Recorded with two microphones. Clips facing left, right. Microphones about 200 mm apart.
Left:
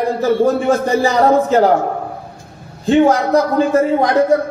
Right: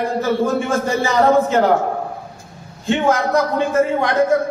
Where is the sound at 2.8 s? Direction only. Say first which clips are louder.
Left 5 dB; 35° left (ahead or behind).